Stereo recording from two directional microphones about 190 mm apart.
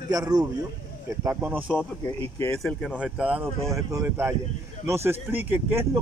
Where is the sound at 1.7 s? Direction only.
10° left (ahead or behind).